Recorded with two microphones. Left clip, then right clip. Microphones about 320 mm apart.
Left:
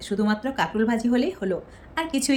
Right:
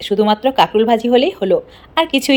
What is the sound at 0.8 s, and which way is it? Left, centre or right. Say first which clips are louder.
Speech: right 12 dB; right.